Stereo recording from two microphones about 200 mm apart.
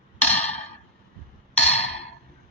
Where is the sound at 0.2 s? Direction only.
35° left (ahead or behind).